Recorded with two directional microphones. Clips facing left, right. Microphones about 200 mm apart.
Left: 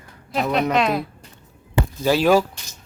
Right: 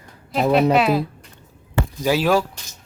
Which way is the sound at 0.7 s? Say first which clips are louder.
Right 3 dB; 5° right (ahead or behind).